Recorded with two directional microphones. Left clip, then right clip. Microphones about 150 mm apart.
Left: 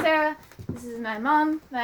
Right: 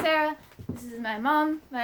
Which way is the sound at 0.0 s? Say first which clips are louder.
Left 2 dB; 50° right (ahead or behind).